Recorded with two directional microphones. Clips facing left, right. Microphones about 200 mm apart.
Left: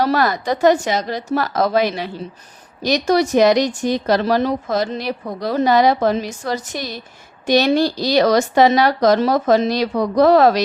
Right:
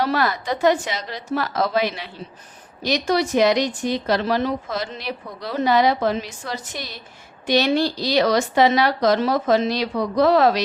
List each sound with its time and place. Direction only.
0.0 s speech: 40° left (ahead or behind)